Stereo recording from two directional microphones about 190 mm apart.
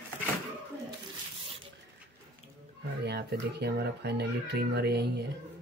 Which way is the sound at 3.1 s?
60° right (ahead or behind).